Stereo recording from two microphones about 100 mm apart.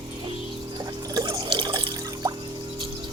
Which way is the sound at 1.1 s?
50° right (ahead or behind).